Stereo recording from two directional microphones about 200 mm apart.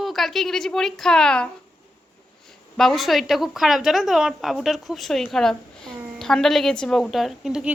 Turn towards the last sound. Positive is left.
turn(degrees=-5)  # may be behind; listen again after turning